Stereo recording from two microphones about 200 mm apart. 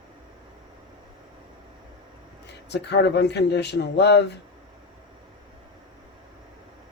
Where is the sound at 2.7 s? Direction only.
55° left (ahead or behind).